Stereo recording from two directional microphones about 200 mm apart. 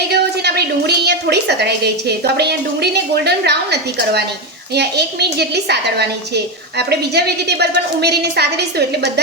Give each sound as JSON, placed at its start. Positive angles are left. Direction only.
{"t": 0.1, "sound": "a woman's voice", "side_deg": -55}